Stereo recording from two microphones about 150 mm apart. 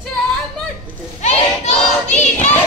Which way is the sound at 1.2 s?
50° left (ahead or behind).